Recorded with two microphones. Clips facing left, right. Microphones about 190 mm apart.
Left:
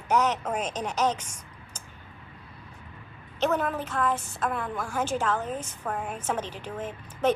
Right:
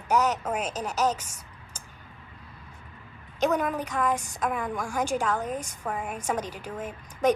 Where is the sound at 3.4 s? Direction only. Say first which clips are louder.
Right 1 dB; 15° right (ahead or behind).